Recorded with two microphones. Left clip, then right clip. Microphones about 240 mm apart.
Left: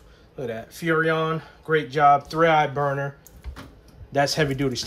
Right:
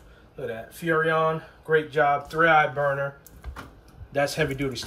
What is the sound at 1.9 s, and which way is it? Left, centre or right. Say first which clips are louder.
Speech: left 5 dB; left.